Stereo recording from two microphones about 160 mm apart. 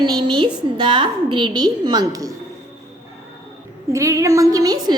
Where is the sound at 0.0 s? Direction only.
25° right (ahead or behind).